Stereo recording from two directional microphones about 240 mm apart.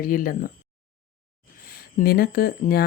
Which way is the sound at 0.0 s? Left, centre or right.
Left.